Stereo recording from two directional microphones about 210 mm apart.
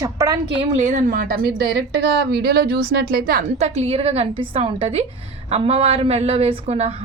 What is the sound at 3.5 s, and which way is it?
A woman's voice, 30° right (ahead or behind).